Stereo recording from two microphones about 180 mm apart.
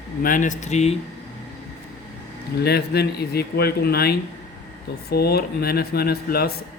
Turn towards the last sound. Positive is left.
turn(degrees=60)  # may be behind; listen again after turning